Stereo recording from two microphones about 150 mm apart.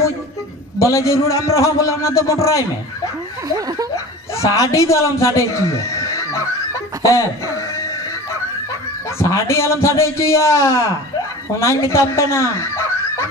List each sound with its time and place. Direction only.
0.7 s a man's voice: 20° left (ahead or behind)
3.4 s speech: 25° right (ahead or behind)
3.9 s a man's voice: 20° left (ahead or behind)
7.0 s a sound: 20° left (ahead or behind)
9.2 s a man's voice: 20° left (ahead or behind)